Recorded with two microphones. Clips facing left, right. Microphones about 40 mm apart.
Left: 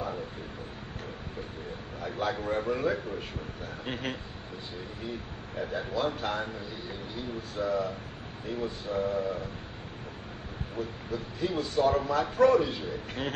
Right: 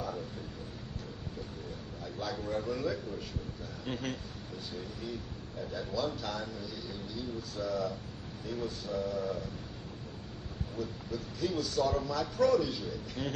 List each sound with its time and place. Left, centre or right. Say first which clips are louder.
2.0 s a man's voice: left 7 dB; left
5.6 s a man's voice: left 4 dB; left
10.8 s a man's voice: left 4 dB; left